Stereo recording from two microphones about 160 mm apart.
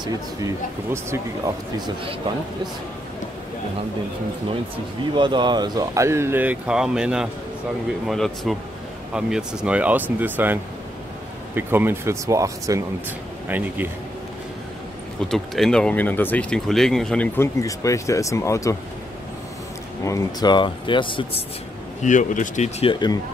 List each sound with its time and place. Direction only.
0.0 s speech: 20° right (ahead or behind)
5.1 s speech: 30° right (ahead or behind); by 13.8 s 10° right (ahead or behind)
15.2 s speech: centre (ahead or behind)
17.4 s speech: 20° left (ahead or behind)
20.1 s speech: 20° left (ahead or behind)
22.0 s speech: 50° left (ahead or behind)